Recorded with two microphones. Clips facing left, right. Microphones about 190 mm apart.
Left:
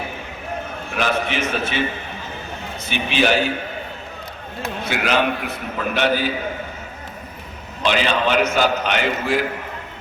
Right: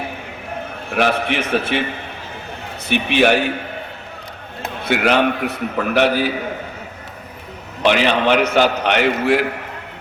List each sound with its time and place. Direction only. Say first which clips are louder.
0.9 s a man's voice: right 4 dB; 60° right (ahead or behind)
2.9 s a man's voice: right 4 dB; 60° right (ahead or behind)
4.6 s a man's voice: right 5 dB; 60° right (ahead or behind)
7.8 s a man's voice: right 4 dB; 65° right (ahead or behind)